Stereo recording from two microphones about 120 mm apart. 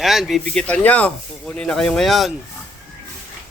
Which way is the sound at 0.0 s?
Centre (ahead or behind).